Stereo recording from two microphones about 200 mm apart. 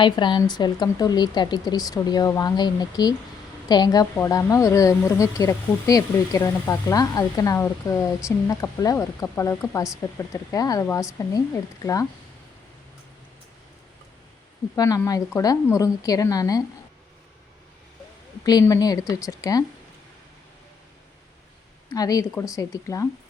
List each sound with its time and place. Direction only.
0.0 s speech: 25° left (ahead or behind)
14.8 s speech: 15° left (ahead or behind)
18.4 s speech: 15° left (ahead or behind)
21.9 s speech: 20° left (ahead or behind)